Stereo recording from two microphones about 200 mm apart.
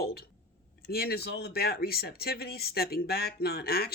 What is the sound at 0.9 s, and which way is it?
Speech, 50° left (ahead or behind).